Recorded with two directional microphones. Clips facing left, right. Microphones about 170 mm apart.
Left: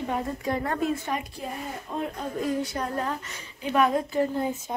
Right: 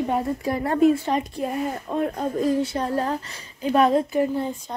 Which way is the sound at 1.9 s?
60° right (ahead or behind).